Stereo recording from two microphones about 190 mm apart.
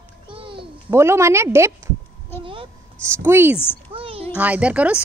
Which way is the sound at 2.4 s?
25° right (ahead or behind).